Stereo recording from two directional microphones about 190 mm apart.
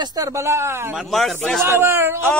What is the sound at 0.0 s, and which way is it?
Speech, 20° right (ahead or behind).